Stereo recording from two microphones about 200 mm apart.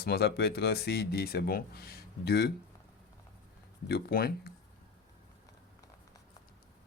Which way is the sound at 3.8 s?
50° left (ahead or behind).